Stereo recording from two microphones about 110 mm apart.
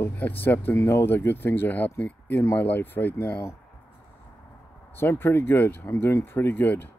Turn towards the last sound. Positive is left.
turn(degrees=20)  # may be behind; listen again after turning